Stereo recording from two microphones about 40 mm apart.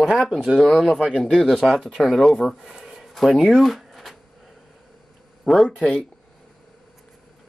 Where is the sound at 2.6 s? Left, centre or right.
Centre.